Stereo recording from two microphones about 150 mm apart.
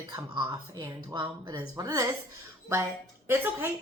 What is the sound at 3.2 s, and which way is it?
Speech, 15° right (ahead or behind).